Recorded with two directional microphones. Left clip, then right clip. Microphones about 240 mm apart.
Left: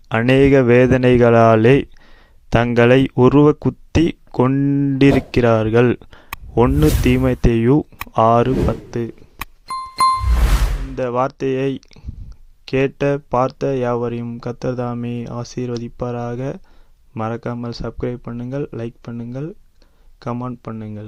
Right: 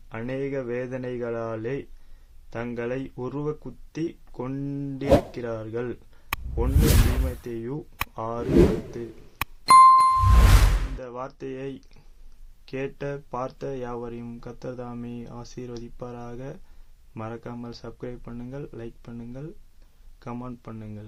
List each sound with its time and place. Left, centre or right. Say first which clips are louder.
0.1 s speech: left 18 dB; left
7.3 s speech: left 18 dB; left
8.4 s speech: left 1 dB; centre
9.4 s music: right 14 dB; centre
10.9 s speech: left 16 dB; left